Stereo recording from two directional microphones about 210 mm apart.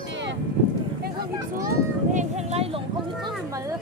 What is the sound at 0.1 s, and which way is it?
Livestock, 55° right (ahead or behind).